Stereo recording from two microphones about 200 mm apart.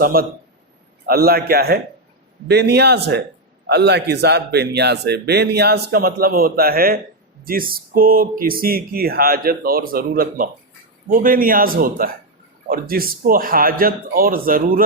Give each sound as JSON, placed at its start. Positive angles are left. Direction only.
{"t": 0.0, "sound": "a man's voice", "side_deg": -45}